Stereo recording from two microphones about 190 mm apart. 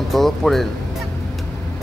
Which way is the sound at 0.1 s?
Centre (ahead or behind).